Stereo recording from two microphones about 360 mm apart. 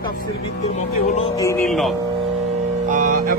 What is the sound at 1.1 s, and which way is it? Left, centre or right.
Speech, centre.